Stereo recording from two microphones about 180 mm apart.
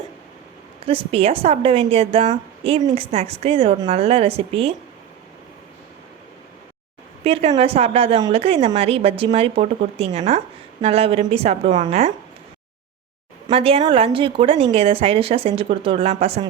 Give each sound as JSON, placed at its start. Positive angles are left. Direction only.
{"t": 0.9, "sound": "a woman's voice", "side_deg": -30}
{"t": 7.3, "sound": "a woman's voice", "side_deg": -30}
{"t": 13.5, "sound": "a woman's voice", "side_deg": -35}